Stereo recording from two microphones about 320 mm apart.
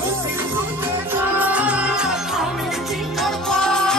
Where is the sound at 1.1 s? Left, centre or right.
Centre.